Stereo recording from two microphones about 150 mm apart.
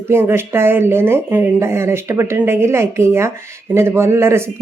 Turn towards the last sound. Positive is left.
turn(degrees=-15)  # may be behind; listen again after turning